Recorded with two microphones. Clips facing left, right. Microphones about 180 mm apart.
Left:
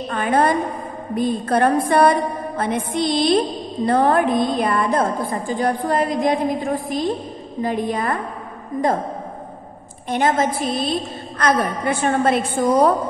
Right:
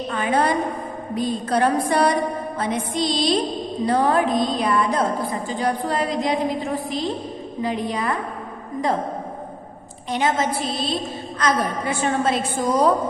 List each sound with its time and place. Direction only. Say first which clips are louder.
0.1 s music: left 3 dB; 50° left (ahead or behind)
10.0 s music: left 3 dB; 50° left (ahead or behind)